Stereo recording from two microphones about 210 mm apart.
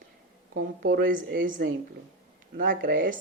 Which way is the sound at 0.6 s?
45° right (ahead or behind).